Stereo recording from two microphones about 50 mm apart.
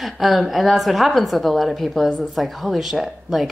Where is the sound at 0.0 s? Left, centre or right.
Centre.